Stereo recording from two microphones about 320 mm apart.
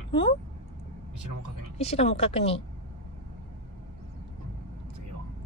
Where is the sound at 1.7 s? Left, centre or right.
Centre.